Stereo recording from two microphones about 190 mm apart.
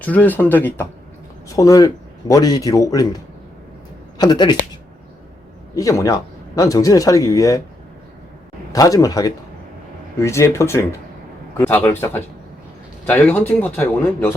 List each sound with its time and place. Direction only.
0.0 s speech: 10° left (ahead or behind)
4.2 s speech: 20° left (ahead or behind)
5.7 s speech: 15° left (ahead or behind)
8.7 s speech: 20° left (ahead or behind)